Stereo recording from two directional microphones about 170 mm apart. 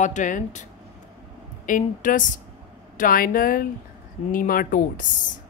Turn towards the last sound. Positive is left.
turn(degrees=55)  # may be behind; listen again after turning